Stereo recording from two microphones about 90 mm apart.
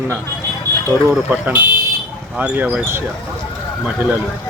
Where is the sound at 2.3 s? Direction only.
15° right (ahead or behind).